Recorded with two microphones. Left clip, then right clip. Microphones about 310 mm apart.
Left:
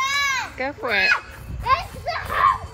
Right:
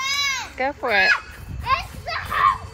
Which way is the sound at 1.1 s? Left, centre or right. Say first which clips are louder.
Even; left.